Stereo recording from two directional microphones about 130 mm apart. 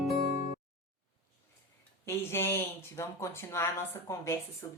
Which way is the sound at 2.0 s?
20° left (ahead or behind).